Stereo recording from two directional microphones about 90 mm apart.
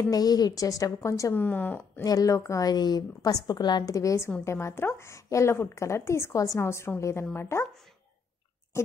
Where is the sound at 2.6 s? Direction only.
50° left (ahead or behind); by 7.6 s 30° left (ahead or behind).